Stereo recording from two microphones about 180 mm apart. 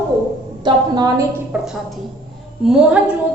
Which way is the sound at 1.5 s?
5° right (ahead or behind).